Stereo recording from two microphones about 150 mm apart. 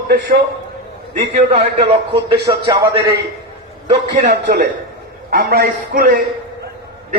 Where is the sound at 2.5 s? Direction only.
30° right (ahead or behind).